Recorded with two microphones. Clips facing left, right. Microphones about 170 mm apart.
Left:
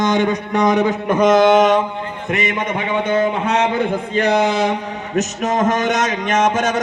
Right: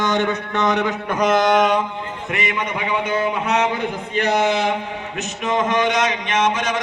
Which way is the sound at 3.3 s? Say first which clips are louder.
Left 2 dB; 30° left (ahead or behind).